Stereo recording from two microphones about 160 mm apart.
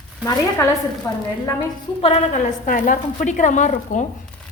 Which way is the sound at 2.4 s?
55° left (ahead or behind).